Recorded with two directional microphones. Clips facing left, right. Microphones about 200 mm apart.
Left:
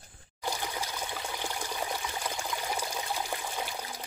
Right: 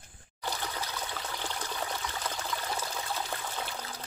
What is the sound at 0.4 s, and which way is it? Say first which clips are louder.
Trickle: left 2 dB; 15° left (ahead or behind).